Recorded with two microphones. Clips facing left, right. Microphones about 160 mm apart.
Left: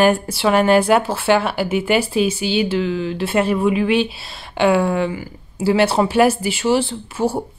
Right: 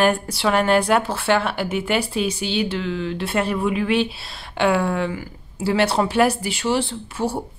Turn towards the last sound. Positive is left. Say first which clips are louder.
# left 3 dB
turn(degrees=5)  # may be behind; listen again after turning